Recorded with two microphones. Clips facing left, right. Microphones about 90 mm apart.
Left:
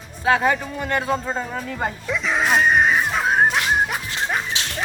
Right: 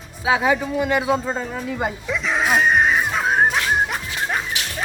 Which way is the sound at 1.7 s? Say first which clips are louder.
Right 1 dB; 10° right (ahead or behind).